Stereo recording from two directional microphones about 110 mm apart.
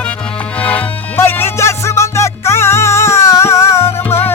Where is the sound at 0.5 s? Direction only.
15° left (ahead or behind).